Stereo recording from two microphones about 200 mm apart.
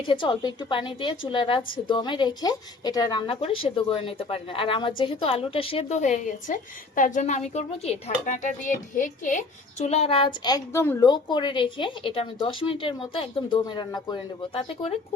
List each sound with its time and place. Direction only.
0.1 s a child's voice: 25° left (ahead or behind)